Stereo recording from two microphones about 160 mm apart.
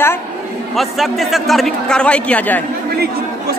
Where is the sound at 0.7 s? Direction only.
Centre (ahead or behind).